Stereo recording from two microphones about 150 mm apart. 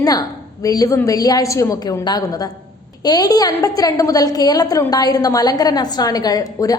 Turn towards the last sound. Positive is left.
turn(degrees=25)  # may be behind; listen again after turning